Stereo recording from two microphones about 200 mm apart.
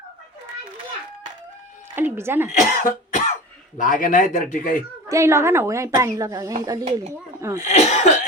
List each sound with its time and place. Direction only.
2.0 s a child's voice: 10° right (ahead or behind)
2.5 s cough: 40° left (ahead or behind)
3.8 s speech: 40° left (ahead or behind)
5.0 s a child's voice: 15° right (ahead or behind)
7.6 s speech: 35° left (ahead or behind)